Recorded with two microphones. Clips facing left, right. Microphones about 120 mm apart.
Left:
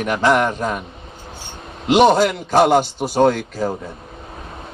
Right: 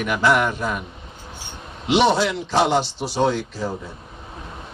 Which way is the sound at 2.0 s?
45° left (ahead or behind).